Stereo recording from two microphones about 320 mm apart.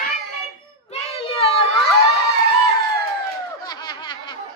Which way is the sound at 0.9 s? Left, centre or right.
Centre.